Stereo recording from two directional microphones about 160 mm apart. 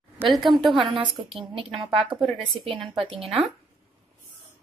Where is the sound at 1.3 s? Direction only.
35° right (ahead or behind).